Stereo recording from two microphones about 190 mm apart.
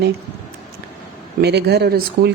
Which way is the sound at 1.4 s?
60° right (ahead or behind).